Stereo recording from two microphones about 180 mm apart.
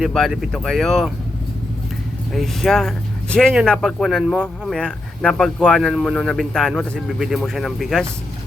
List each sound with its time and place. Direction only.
0.0 s speech: centre (ahead or behind)
2.3 s speech: centre (ahead or behind)